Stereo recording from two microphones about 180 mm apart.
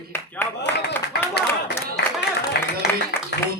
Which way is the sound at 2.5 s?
65° left (ahead or behind).